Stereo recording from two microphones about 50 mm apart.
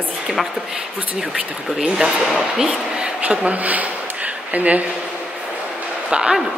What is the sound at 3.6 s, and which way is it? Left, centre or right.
Speech, right.